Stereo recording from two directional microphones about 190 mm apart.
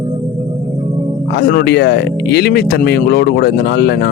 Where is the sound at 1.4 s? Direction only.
55° left (ahead or behind).